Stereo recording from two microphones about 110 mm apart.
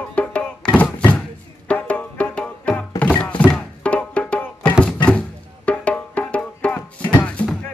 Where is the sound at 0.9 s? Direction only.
10° left (ahead or behind).